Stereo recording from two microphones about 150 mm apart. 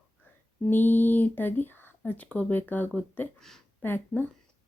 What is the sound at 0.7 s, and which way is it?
Speech, 15° left (ahead or behind).